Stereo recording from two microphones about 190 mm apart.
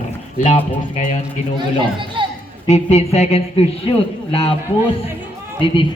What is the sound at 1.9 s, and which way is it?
Speech, 25° right (ahead or behind).